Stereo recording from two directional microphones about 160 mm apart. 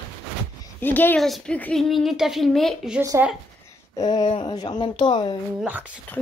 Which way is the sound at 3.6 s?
20° left (ahead or behind).